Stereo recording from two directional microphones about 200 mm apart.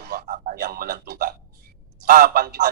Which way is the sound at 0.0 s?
45° right (ahead or behind).